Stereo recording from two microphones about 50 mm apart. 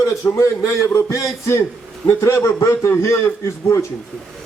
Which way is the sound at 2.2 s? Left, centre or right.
Left.